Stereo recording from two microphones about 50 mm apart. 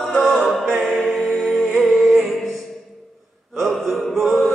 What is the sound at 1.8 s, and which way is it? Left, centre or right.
Music, centre.